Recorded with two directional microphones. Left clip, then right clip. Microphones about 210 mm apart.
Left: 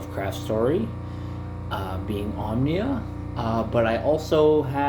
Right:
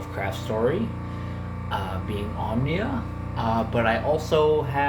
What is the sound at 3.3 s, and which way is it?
Speech, 55° left (ahead or behind).